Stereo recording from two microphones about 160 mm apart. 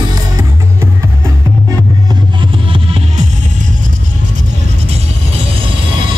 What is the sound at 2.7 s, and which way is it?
Music, 35° right (ahead or behind).